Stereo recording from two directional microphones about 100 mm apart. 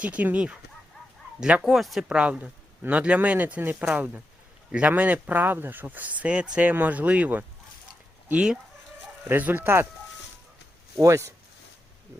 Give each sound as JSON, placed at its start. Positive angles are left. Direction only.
{"t": 0.0, "sound": "speech", "side_deg": -15}
{"t": 11.0, "sound": "speech", "side_deg": -30}